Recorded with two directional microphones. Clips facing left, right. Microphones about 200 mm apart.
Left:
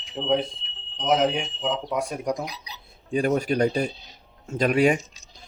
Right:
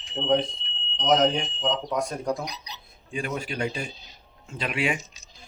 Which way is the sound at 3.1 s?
40° left (ahead or behind).